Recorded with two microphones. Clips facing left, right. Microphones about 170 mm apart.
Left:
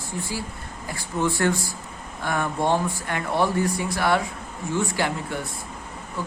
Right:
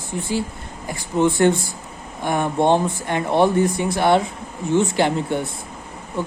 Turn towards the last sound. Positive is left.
turn(degrees=-25)  # may be behind; listen again after turning